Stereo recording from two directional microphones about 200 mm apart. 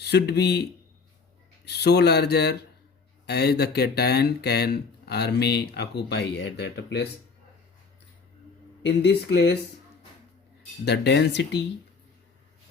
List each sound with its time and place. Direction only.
0.0 s speech: 55° left (ahead or behind)
8.8 s speech: 55° left (ahead or behind)
10.8 s speech: 55° left (ahead or behind)